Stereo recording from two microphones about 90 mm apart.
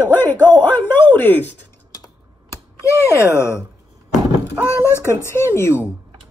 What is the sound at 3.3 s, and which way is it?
Speech, 30° left (ahead or behind).